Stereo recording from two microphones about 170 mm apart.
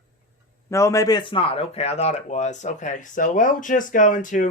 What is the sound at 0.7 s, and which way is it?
A man's voice, 15° left (ahead or behind).